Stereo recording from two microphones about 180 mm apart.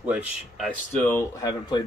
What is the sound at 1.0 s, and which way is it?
Speech, 10° left (ahead or behind).